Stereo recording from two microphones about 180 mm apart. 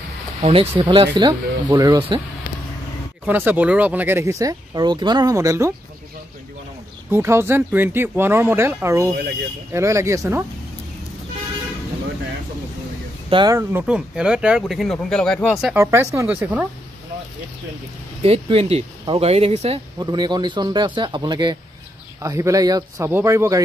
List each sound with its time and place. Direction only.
0.4 s speech: 30° right (ahead or behind)
3.3 s speech: 10° right (ahead or behind)
7.1 s speech: 15° right (ahead or behind)
13.3 s speech: 25° right (ahead or behind)
13.6 s speech: 10° right (ahead or behind)
15.8 s speech: 15° right (ahead or behind)
18.2 s speech: 35° right (ahead or behind)
20.0 s speech: 25° right (ahead or behind)